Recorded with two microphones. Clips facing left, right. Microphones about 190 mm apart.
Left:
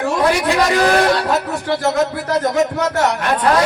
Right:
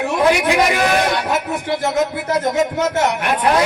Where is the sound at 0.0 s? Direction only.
15° right (ahead or behind).